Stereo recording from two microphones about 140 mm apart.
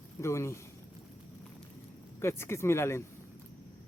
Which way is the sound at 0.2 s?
20° left (ahead or behind).